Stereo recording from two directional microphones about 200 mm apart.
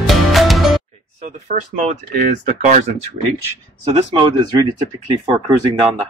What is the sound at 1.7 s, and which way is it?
Speech, 45° right (ahead or behind).